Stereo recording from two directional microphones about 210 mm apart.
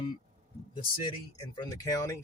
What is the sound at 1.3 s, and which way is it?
Speech, 20° left (ahead or behind).